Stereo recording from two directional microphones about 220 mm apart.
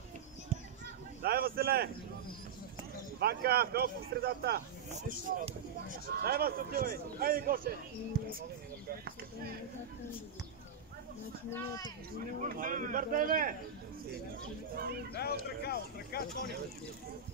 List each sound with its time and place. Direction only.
1.2 s speech: 45° right (ahead or behind)
3.2 s speech: 45° right (ahead or behind)
4.9 s speech: 35° right (ahead or behind)
11.5 s speech: 15° left (ahead or behind)
12.4 s speech: 40° right (ahead or behind)
14.8 s speech: 45° right (ahead or behind)
15.1 s speech: 45° left (ahead or behind)